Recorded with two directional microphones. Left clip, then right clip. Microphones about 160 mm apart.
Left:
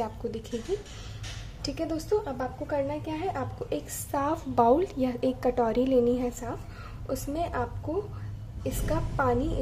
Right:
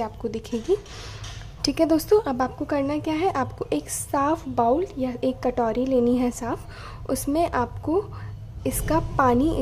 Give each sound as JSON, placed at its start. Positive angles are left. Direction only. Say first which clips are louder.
{"t": 0.0, "sound": "a woman's voice", "louder": "right 4 dB", "side_deg": -25}
{"t": 1.6, "sound": "a woman's voice", "louder": "right 11 dB", "side_deg": -45}
{"t": 4.1, "sound": "a woman's voice", "louder": "right 6 dB", "side_deg": -20}
{"t": 4.6, "sound": "a woman's voice", "louder": "left 1 dB", "side_deg": -5}
{"t": 6.0, "sound": "a woman's voice", "louder": "right 4 dB", "side_deg": -25}
{"t": 7.1, "sound": "a woman's voice", "louder": "right 8 dB", "side_deg": -40}